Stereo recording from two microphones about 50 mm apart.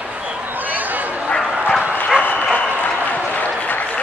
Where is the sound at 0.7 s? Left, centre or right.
Right.